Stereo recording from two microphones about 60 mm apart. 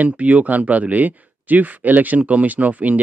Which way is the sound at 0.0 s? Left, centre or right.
Right.